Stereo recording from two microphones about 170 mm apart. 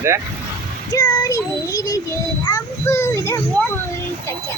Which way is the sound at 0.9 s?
20° left (ahead or behind).